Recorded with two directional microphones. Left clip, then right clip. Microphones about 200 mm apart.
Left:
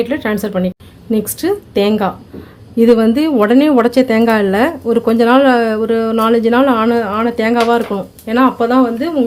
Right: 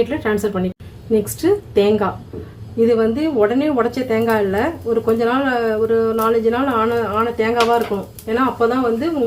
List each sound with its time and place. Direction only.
0.1 s a woman's voice: 40° left (ahead or behind)
2.7 s a woman's voice: 55° left (ahead or behind)